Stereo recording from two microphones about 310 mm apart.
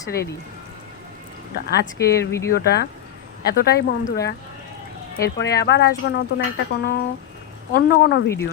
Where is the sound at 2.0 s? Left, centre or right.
Centre.